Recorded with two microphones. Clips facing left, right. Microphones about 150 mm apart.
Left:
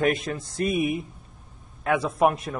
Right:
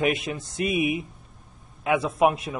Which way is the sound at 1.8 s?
5° right (ahead or behind).